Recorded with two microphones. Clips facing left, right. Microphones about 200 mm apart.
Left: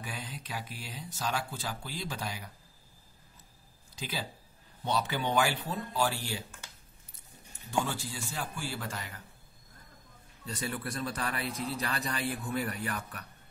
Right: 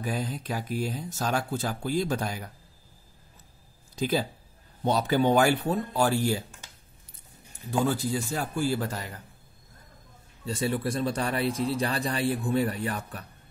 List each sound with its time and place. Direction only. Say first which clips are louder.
0.0 s speech: right 11 dB; 40° right (ahead or behind)
3.9 s speech: right 12 dB; 45° right (ahead or behind)
7.8 s a man's voice: right 10 dB; 40° right (ahead or behind)
10.4 s a man's voice: right 8 dB; 25° right (ahead or behind)